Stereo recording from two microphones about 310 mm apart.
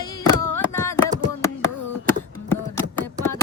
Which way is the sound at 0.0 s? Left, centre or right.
Centre.